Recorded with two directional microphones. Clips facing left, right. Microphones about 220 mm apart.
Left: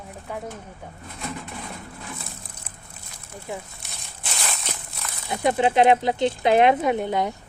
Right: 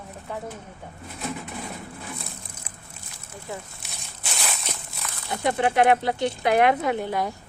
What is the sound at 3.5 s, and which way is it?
Speech, 20° left (ahead or behind).